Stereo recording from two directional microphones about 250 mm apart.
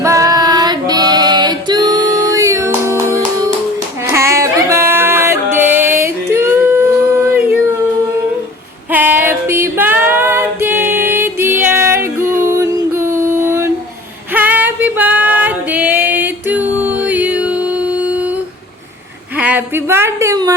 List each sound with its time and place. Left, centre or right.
0.0 s female singing: centre
4.0 s music: centre
8.9 s female singing: centre
11.6 s music: centre
14.3 s female singing: centre
19.4 s a sound: centre